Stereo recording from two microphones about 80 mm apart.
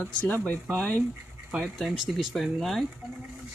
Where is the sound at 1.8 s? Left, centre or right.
Centre.